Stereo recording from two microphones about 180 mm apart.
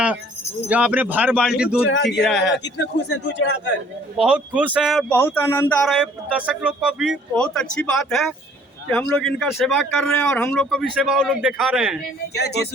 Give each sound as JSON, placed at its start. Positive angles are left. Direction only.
{"t": 0.7, "sound": "speech", "side_deg": -10}
{"t": 3.1, "sound": "speech", "side_deg": 75}
{"t": 4.2, "sound": "speech", "side_deg": -5}
{"t": 5.8, "sound": "speech", "side_deg": -5}
{"t": 12.3, "sound": "music", "side_deg": 65}